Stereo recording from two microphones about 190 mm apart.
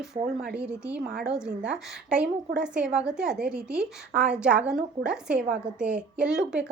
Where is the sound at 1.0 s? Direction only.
55° right (ahead or behind).